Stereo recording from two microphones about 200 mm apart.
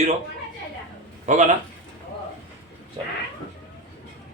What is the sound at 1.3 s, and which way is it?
Speech, 35° right (ahead or behind).